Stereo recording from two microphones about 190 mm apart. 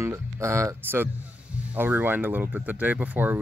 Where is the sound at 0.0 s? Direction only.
15° right (ahead or behind).